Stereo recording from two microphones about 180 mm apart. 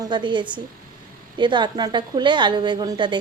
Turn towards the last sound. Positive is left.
turn(degrees=-25)  # may be behind; listen again after turning